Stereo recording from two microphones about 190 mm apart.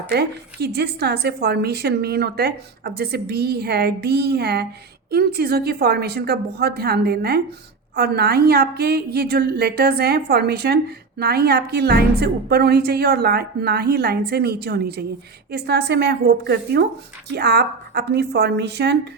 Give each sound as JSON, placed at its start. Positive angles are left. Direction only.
{"t": 0.1, "sound": "a woman's voice", "side_deg": -60}